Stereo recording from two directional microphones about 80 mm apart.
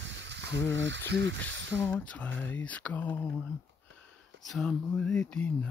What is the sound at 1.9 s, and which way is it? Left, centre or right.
Speech, centre.